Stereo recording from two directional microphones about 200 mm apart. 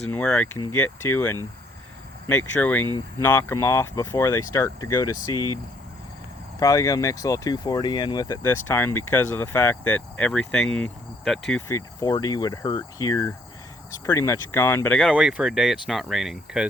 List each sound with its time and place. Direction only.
0.1 s speech: 5° left (ahead or behind)
2.6 s speech: 10° left (ahead or behind)
6.6 s speech: 15° left (ahead or behind); by 11.6 s centre (ahead or behind)
11.7 s speech: 20° left (ahead or behind)
15.1 s speech: 5° right (ahead or behind)